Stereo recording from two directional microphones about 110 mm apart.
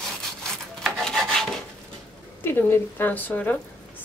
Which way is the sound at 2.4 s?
20° left (ahead or behind).